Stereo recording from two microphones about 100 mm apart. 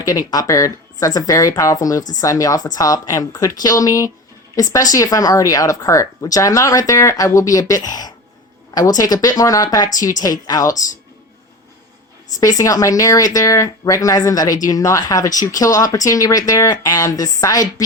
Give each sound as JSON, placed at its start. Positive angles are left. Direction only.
{"t": 0.0, "sound": "speech", "side_deg": 40}
{"t": 12.4, "sound": "speech", "side_deg": 35}